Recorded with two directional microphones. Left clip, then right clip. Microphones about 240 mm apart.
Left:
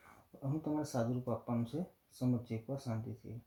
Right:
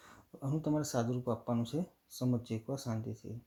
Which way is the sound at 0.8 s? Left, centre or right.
Right.